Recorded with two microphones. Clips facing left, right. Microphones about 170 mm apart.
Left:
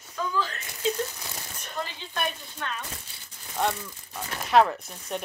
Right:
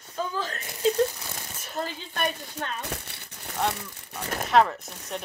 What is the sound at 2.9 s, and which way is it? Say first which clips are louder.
Crumpling: right 7 dB; 70° right (ahead or behind).